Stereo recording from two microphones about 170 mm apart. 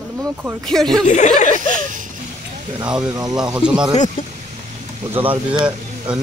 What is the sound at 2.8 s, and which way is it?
Speech, 5° right (ahead or behind).